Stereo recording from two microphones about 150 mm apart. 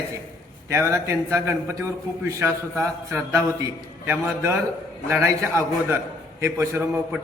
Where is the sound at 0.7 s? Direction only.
20° right (ahead or behind).